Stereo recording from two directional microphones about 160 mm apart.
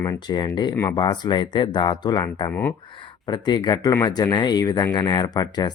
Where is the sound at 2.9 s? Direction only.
30° left (ahead or behind).